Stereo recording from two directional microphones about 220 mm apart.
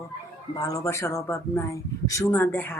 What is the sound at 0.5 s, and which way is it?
Speech, 15° left (ahead or behind).